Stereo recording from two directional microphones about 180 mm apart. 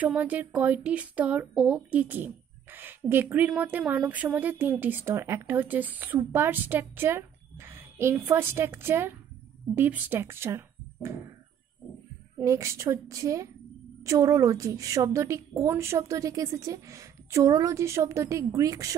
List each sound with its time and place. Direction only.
0.0 s speech: 10° right (ahead or behind)
12.4 s speech: 15° right (ahead or behind)